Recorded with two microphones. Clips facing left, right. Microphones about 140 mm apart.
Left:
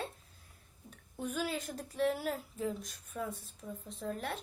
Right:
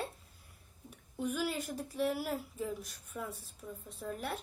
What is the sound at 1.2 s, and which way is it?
Speech, 10° right (ahead or behind).